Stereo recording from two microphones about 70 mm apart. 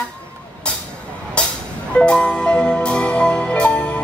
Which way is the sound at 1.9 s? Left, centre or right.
Centre.